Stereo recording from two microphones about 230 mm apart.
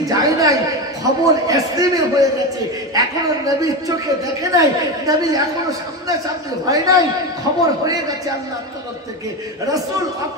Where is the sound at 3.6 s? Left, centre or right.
Centre.